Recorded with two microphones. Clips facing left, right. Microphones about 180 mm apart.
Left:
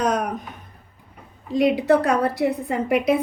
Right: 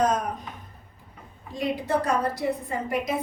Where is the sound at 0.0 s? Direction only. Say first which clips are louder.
Left 2 dB; 70° left (ahead or behind).